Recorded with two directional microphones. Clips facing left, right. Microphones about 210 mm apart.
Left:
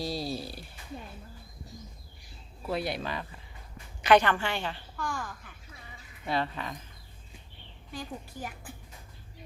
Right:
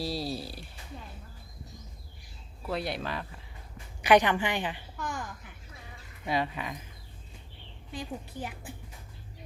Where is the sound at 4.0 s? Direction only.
15° right (ahead or behind).